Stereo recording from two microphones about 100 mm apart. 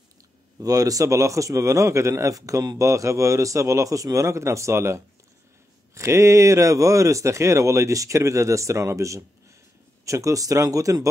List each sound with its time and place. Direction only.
0.6 s a man's voice: 35° right (ahead or behind)